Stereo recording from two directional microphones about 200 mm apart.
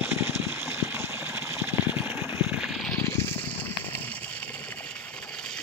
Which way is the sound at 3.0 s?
15° left (ahead or behind).